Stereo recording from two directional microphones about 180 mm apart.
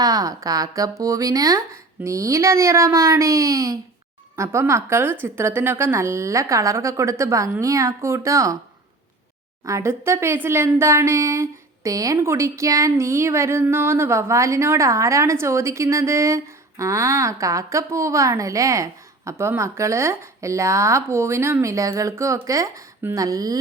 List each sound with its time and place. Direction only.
0.0 s speech: 20° right (ahead or behind)
9.6 s speech: 15° right (ahead or behind)